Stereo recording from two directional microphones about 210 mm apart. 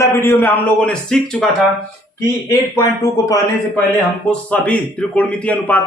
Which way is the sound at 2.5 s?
15° left (ahead or behind).